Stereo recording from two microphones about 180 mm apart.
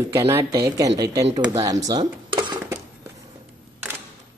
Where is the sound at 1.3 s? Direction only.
20° right (ahead or behind).